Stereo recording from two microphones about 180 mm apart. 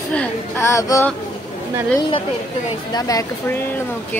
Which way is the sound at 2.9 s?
20° left (ahead or behind).